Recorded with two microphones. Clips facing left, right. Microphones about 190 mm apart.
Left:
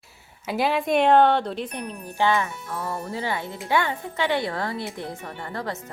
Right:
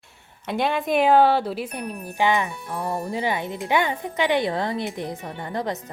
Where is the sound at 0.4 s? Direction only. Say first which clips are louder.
Even; 5° left (ahead or behind).